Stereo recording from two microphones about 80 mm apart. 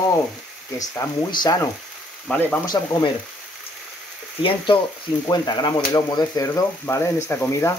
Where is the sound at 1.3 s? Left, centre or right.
Left.